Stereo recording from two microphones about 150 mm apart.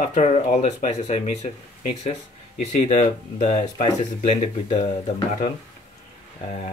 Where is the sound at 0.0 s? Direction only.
55° left (ahead or behind).